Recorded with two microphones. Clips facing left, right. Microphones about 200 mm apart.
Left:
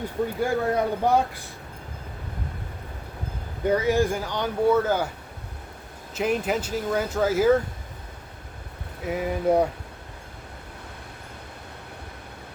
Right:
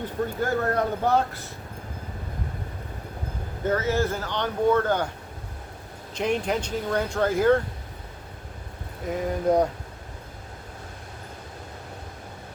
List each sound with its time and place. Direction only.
0.4 s speech: 10° left (ahead or behind)
3.6 s speech: 15° left (ahead or behind)
6.1 s speech: 5° left (ahead or behind)
9.0 s speech: 5° left (ahead or behind)